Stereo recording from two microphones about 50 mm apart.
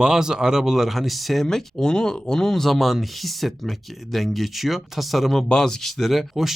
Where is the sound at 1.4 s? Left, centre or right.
Centre.